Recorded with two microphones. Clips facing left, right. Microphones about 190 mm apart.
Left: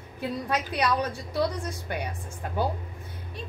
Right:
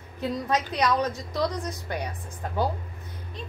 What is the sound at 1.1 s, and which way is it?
Speech, 30° left (ahead or behind).